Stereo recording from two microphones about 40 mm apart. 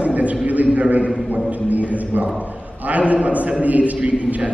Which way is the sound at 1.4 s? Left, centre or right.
Right.